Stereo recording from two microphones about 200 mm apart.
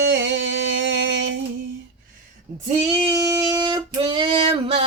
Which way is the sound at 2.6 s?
30° right (ahead or behind).